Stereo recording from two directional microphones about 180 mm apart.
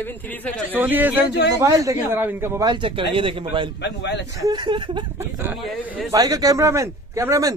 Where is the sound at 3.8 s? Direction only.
75° left (ahead or behind).